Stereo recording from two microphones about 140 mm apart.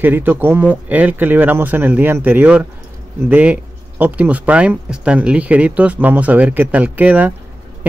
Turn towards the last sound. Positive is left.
turn(degrees=-10)  # may be behind; listen again after turning